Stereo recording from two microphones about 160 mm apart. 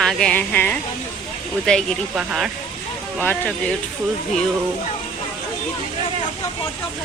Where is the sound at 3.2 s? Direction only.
10° left (ahead or behind).